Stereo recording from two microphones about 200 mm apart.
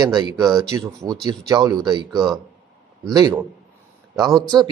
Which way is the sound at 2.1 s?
Centre (ahead or behind).